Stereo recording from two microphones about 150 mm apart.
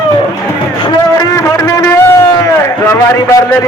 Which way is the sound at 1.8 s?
15° left (ahead or behind).